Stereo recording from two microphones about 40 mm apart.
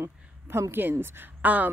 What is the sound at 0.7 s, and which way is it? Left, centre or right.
Speech, right.